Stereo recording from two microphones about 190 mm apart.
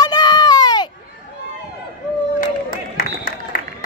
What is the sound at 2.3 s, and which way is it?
Run, 45° left (ahead or behind).